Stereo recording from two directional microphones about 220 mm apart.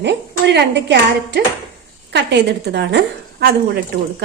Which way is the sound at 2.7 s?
50° right (ahead or behind).